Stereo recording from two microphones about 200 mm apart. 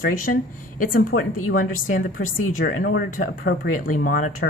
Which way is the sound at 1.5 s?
45° left (ahead or behind).